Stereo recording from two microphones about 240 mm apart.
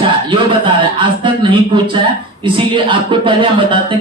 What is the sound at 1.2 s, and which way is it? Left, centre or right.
Speech, right.